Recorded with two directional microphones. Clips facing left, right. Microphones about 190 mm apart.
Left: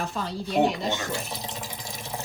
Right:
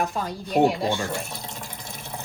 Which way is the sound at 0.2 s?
15° right (ahead or behind).